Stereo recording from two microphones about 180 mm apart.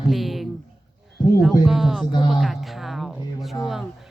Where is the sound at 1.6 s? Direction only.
Centre (ahead or behind).